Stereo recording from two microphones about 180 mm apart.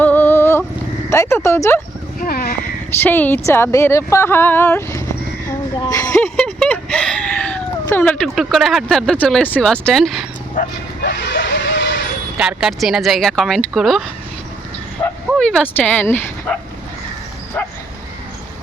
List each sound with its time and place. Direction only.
0.0 s a sound: 10° left (ahead or behind)
1.1 s speech: 15° left (ahead or behind)
2.2 s a sound: 55° left (ahead or behind)
3.0 s speech: 10° left (ahead or behind)
6.1 s speech: 5° left (ahead or behind)
10.6 s bow-wow: 50° left (ahead or behind)
11.0 s a sound: 65° left (ahead or behind)
12.4 s speech: 5° right (ahead or behind)
15.0 s bow-wow: 20° left (ahead or behind)
15.4 s speech: 5° left (ahead or behind)